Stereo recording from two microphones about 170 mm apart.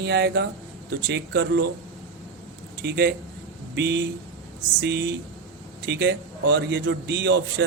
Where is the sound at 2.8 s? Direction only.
75° right (ahead or behind).